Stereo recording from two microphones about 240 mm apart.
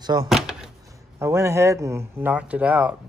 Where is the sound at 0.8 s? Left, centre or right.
Centre.